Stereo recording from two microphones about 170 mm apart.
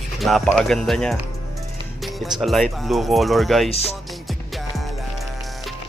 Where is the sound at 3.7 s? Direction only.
35° left (ahead or behind).